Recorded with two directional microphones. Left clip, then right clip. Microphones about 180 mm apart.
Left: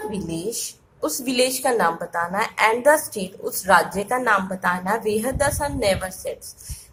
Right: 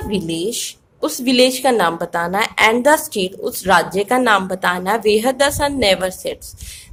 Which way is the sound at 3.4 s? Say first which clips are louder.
Right 2 dB; 45° right (ahead or behind).